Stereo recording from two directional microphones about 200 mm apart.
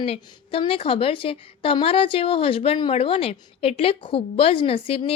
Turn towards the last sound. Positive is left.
turn(degrees=30)  # may be behind; listen again after turning